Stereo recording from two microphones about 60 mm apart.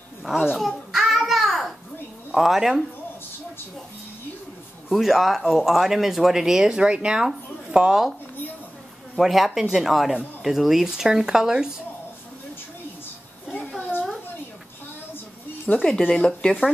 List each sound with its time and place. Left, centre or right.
0.2 s babbling: centre
2.3 s speech: centre
4.8 s speech: centre
9.2 s speech: centre
13.5 s a sound: left
15.7 s speech: left
16.1 s speech: centre